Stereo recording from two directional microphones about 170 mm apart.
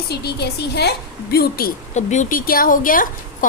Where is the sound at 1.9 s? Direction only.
45° left (ahead or behind).